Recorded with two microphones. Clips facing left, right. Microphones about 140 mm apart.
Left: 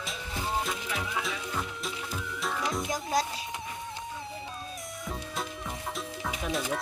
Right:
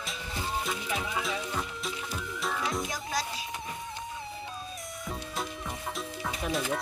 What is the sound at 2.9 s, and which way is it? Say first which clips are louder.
Music: left 5 dB; 20° left (ahead or behind).